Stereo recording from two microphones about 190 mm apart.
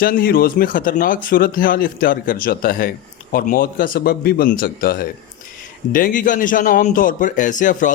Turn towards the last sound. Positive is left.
turn(degrees=45)  # may be behind; listen again after turning